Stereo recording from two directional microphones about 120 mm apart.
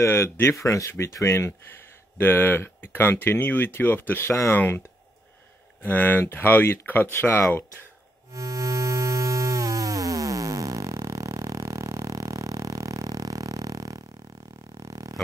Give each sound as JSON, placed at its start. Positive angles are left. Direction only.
{"t": 0.0, "sound": "speech", "side_deg": 20}
{"t": 8.3, "sound": "music", "side_deg": -30}
{"t": 14.8, "sound": "a sound", "side_deg": -30}